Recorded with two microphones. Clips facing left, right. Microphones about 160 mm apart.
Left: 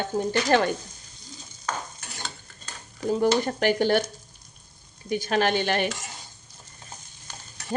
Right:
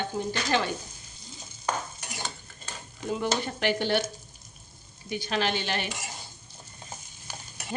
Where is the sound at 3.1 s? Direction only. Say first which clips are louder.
Left 7 dB; 40° left (ahead or behind).